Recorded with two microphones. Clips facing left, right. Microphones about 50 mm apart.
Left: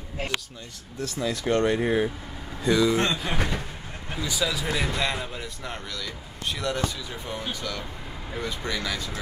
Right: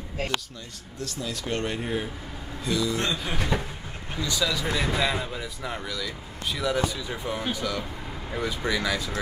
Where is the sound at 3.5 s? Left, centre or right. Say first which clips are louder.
Right 4 dB; centre.